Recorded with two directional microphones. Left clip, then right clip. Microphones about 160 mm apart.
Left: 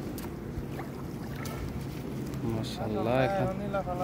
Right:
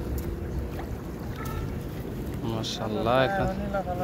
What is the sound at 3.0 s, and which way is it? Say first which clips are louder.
Speech: right 5 dB; 10° left (ahead or behind).